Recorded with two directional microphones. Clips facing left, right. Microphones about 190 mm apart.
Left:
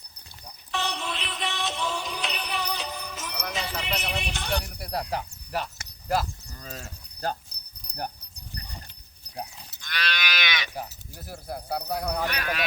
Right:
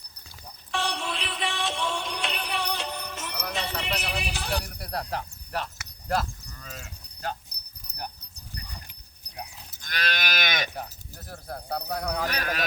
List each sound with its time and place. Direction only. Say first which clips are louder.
0.7 s music: right 1 dB; centre (ahead or behind)
4.8 s speech: left 2 dB; centre (ahead or behind)
6.6 s cricket: left 4 dB; 40° left (ahead or behind)
7.8 s dog: left 4 dB; 5° right (ahead or behind)
9.7 s livestock: right 1 dB; 45° right (ahead or behind)
10.8 s speech: left 1 dB; 10° left (ahead or behind)
12.3 s speech: even; 40° right (ahead or behind)